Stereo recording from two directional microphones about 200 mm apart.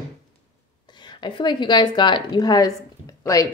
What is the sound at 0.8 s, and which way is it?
A woman's voice, 20° left (ahead or behind).